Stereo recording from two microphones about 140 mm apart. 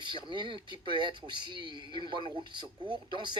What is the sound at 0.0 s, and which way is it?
A man's voice, 35° right (ahead or behind).